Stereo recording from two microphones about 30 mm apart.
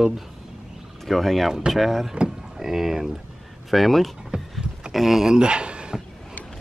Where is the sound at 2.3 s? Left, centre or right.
Centre.